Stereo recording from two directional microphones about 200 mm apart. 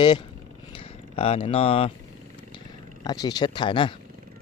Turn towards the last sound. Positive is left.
turn(degrees=25)  # may be behind; listen again after turning